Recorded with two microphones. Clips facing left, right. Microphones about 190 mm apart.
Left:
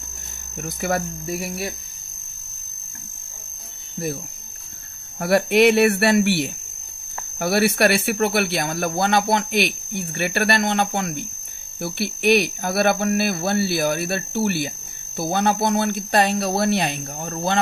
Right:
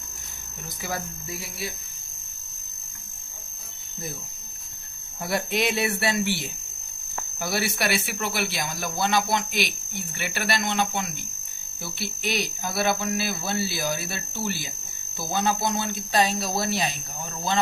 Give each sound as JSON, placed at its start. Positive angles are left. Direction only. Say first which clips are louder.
{"t": 0.6, "sound": "speech", "louder": "left 9 dB", "side_deg": 60}
{"t": 5.2, "sound": "speech", "louder": "left 10 dB", "side_deg": 65}